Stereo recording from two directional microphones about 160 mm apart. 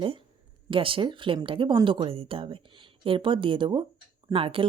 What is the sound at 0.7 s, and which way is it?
Speech, 35° right (ahead or behind).